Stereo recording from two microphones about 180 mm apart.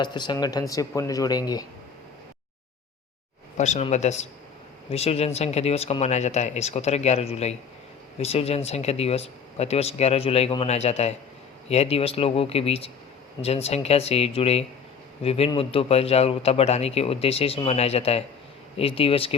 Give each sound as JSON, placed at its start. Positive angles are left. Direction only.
{"t": 0.0, "sound": "speech", "side_deg": 25}
{"t": 3.6, "sound": "a man's voice", "side_deg": 40}